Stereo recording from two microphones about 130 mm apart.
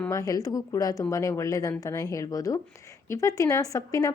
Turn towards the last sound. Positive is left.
turn(degrees=25)  # may be behind; listen again after turning